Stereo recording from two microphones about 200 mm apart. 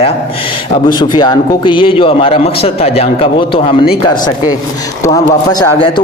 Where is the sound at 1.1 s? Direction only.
20° left (ahead or behind).